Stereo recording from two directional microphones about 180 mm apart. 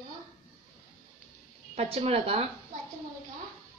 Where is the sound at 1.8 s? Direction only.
35° right (ahead or behind).